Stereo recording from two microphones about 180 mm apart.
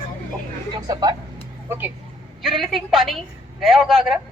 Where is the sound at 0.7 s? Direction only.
20° right (ahead or behind).